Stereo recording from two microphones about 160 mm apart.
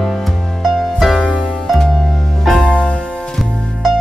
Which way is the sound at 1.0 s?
Centre (ahead or behind).